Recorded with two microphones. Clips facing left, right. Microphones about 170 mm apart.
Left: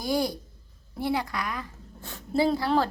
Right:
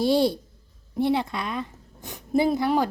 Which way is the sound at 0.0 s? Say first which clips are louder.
Right 6 dB; 30° right (ahead or behind).